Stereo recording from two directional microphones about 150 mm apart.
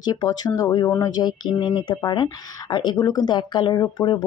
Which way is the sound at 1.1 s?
30° left (ahead or behind).